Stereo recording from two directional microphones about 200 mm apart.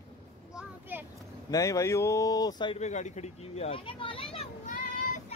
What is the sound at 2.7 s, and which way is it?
Speech, 35° left (ahead or behind).